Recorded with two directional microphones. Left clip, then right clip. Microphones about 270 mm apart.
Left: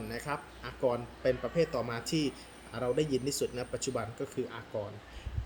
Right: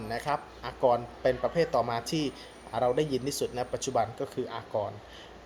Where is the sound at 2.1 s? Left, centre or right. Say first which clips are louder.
Right 1 dB; centre.